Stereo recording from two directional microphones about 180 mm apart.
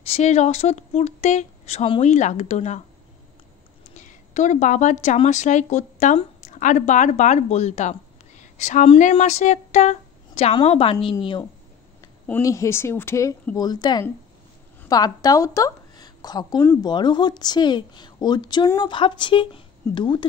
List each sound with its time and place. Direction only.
0.0 s speech: 35° left (ahead or behind)
3.9 s a woman's voice: 45° left (ahead or behind)
12.3 s a woman's voice: 15° left (ahead or behind)